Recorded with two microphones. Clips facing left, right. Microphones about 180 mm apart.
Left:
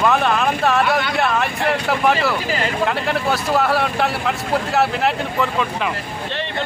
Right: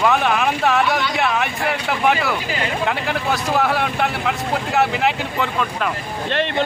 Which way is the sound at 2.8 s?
Centre (ahead or behind).